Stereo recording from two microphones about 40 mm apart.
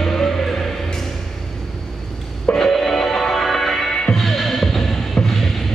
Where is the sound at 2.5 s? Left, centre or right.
Centre.